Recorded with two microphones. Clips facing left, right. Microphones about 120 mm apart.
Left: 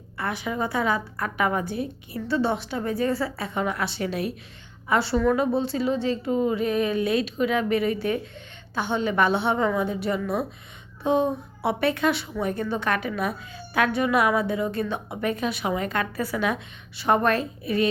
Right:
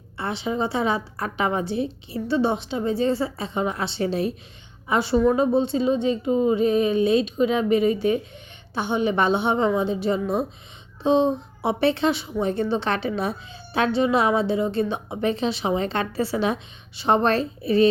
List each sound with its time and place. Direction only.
0.2 s a woman's voice: 25° right (ahead or behind)